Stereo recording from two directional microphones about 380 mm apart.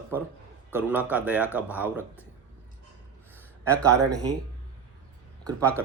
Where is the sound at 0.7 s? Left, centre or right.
Centre.